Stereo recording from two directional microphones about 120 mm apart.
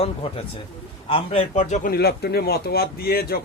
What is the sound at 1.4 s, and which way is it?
Speech, 75° left (ahead or behind).